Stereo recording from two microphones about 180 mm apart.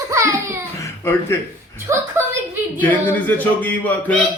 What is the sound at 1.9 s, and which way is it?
Speech, 15° right (ahead or behind).